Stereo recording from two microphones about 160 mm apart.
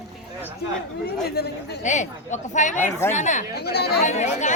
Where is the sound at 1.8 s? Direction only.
50° left (ahead or behind).